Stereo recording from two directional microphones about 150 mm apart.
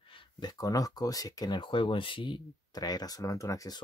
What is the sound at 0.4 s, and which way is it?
Speech, 25° left (ahead or behind).